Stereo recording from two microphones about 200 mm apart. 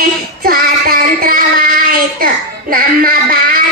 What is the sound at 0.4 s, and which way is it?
Child singing, 50° right (ahead or behind).